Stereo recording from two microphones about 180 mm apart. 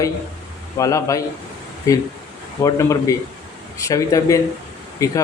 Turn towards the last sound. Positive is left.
turn(degrees=20)  # may be behind; listen again after turning